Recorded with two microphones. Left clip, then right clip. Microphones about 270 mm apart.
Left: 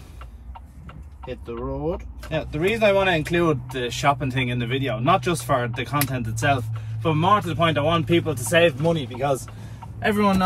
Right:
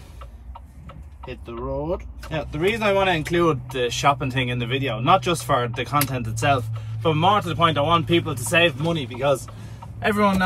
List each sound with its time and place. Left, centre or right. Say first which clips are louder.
1.5 s speech: right 1 dB; centre